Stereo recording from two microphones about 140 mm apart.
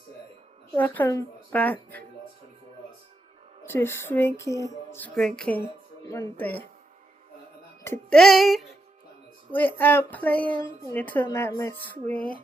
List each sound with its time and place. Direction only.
0.7 s speech: 10° left (ahead or behind)
3.7 s speech: 15° left (ahead or behind)
6.1 s speech: 20° left (ahead or behind)
8.1 s music: centre (ahead or behind)
9.5 s speech: 15° left (ahead or behind)